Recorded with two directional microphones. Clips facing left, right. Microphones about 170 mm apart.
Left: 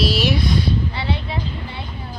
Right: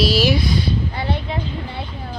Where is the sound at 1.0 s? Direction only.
50° right (ahead or behind).